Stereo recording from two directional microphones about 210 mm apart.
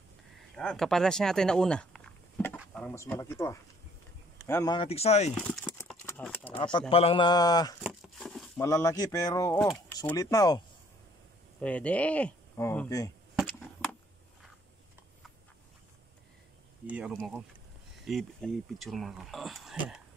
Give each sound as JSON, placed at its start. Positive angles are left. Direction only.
{"t": 0.6, "sound": "speech", "side_deg": 5}
{"t": 4.7, "sound": "speech", "side_deg": 30}
{"t": 5.3, "sound": "a sound", "side_deg": 5}
{"t": 6.5, "sound": "speech", "side_deg": 25}
{"t": 7.8, "sound": "a sound", "side_deg": 0}
{"t": 8.5, "sound": "speech", "side_deg": 15}
{"t": 11.6, "sound": "speech", "side_deg": 5}
{"t": 16.8, "sound": "speech", "side_deg": -5}